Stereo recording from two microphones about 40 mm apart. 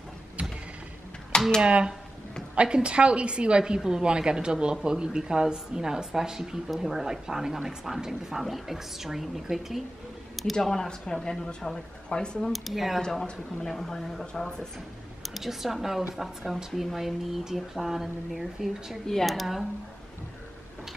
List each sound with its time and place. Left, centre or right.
0.4 s mechanisms: right
1.6 s a woman's voice: right; by 9.8 s centre
10.3 s speech: centre; by 12.4 s left
12.5 s speech: centre
13.1 s speech: centre
15.2 s speech: centre